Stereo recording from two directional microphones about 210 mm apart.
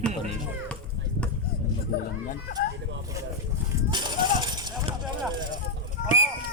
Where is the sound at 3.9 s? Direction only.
20° right (ahead or behind).